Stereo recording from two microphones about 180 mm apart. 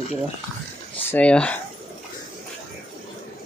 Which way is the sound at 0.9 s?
5° left (ahead or behind).